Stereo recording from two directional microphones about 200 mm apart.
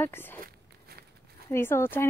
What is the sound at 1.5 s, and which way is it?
Speech, 10° left (ahead or behind).